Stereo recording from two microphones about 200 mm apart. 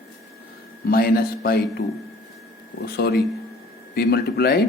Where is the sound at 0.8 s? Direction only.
50° left (ahead or behind).